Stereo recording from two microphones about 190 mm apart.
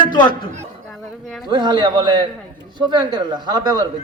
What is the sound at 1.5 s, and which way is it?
Speech, 25° right (ahead or behind).